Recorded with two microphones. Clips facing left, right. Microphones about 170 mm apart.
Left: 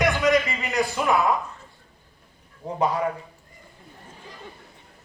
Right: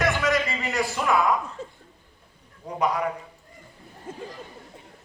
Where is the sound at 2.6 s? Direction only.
25° left (ahead or behind).